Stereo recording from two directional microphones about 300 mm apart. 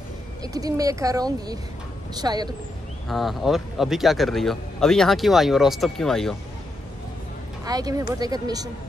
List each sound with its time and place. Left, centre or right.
0.4 s speech: centre
3.1 s a man's voice: centre
7.6 s speech: centre